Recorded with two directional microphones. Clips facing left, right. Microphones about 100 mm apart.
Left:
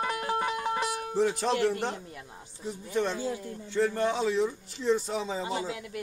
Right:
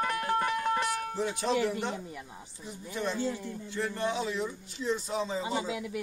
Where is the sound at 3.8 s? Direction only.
40° left (ahead or behind).